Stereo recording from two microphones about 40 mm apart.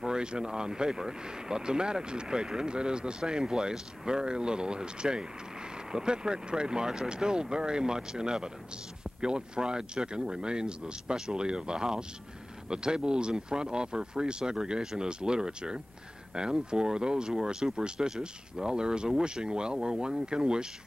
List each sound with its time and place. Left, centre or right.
0.0 s speech: centre
17.4 s speech: centre